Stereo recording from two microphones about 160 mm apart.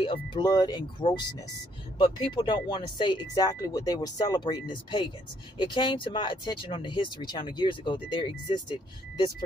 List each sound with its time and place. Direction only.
0.0 s speech: 35° left (ahead or behind)